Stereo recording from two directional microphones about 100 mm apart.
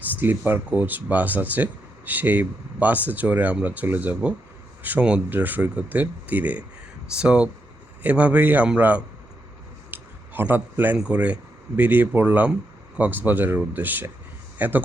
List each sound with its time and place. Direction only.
0.2 s speech: 20° right (ahead or behind)
9.9 s a sound: 20° right (ahead or behind)
11.1 s speech: 15° right (ahead or behind)